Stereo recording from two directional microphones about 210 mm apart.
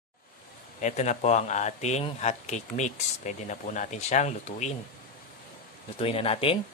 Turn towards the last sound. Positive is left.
turn(degrees=25)  # may be behind; listen again after turning